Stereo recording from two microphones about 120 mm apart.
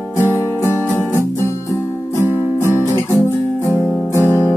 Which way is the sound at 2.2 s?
20° right (ahead or behind).